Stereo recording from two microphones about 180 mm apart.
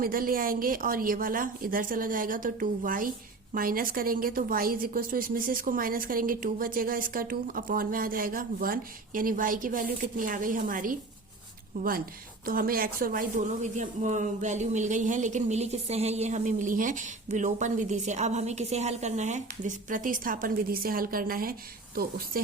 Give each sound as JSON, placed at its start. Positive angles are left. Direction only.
{"t": 0.0, "sound": "a woman's voice", "side_deg": -55}